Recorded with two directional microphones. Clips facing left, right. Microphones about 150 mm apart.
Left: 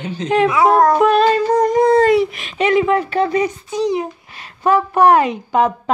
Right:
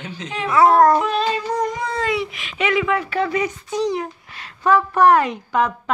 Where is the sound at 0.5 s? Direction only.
15° left (ahead or behind).